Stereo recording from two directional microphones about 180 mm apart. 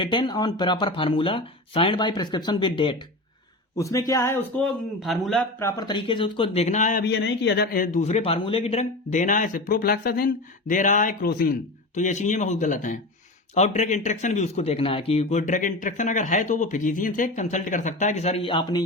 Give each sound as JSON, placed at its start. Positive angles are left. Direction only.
{"t": 0.0, "sound": "speech", "side_deg": 25}
{"t": 3.8, "sound": "speech", "side_deg": 15}
{"t": 5.5, "sound": "speech", "side_deg": 15}
{"t": 5.9, "sound": "speech", "side_deg": 30}
{"t": 7.0, "sound": "speech", "side_deg": 75}
{"t": 11.9, "sound": "speech", "side_deg": 45}